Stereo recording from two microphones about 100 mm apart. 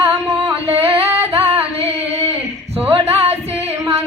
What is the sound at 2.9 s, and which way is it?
Music, 90° right.